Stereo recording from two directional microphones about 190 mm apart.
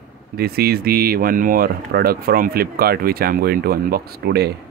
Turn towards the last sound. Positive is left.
turn(degrees=-55)  # may be behind; listen again after turning